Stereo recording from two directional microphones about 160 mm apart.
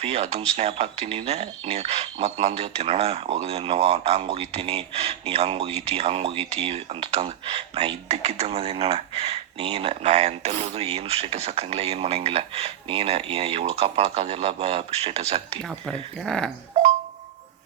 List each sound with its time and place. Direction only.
0.0 s speech: 40° right (ahead or behind)
15.9 s speech: 5° left (ahead or behind)